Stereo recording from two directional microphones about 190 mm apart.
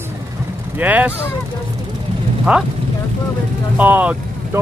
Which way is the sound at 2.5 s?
5° right (ahead or behind).